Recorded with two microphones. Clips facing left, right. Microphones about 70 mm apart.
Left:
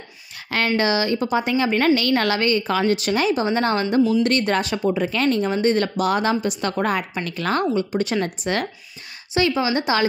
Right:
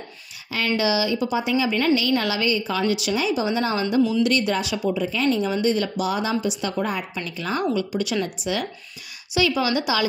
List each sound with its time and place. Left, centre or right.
0.7 s a woman's voice: left
5.0 s a woman's voice: left
7.7 s a woman's voice: left
9.3 s a woman's voice: left
9.8 s a woman's voice: left